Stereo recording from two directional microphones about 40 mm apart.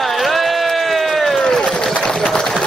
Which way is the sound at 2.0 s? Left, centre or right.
Centre.